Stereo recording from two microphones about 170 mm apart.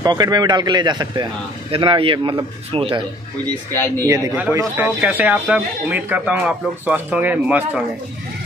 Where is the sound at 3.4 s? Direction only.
15° left (ahead or behind).